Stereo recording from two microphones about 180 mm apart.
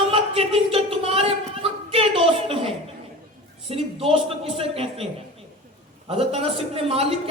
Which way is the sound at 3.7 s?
30° right (ahead or behind).